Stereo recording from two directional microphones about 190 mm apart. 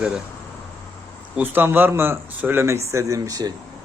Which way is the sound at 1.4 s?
10° right (ahead or behind).